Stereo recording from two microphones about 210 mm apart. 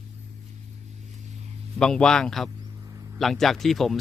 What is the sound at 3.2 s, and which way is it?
Speech, centre (ahead or behind).